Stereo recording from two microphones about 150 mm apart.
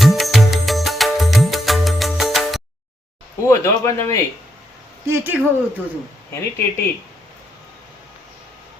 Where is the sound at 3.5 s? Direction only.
20° left (ahead or behind).